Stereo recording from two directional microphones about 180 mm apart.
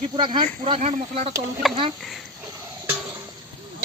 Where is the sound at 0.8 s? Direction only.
40° right (ahead or behind).